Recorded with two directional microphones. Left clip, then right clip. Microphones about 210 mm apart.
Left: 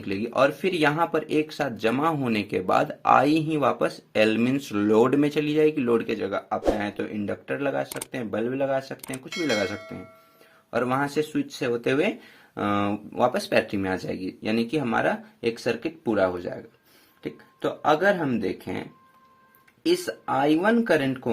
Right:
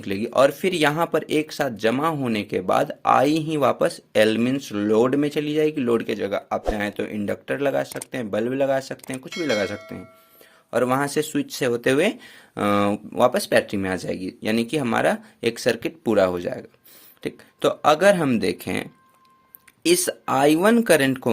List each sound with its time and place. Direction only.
0.0 s speech: 25° right (ahead or behind)
9.3 s speech: centre (ahead or behind)
10.7 s speech: 25° right (ahead or behind); by 18.8 s 40° right (ahead or behind)
19.8 s speech: 35° right (ahead or behind)